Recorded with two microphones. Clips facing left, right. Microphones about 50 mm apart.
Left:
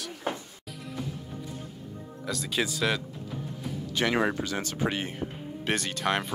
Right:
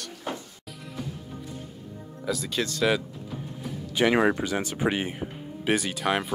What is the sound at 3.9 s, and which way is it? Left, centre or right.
Speech, centre.